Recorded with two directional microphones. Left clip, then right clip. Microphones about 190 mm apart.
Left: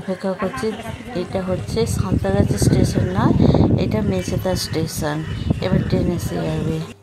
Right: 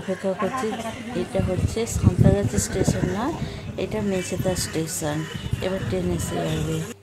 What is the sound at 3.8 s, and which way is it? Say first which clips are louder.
A woman's voice: left 4 dB; 15° left (ahead or behind).